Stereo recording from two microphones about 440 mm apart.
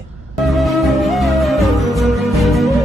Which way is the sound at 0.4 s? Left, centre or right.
Centre.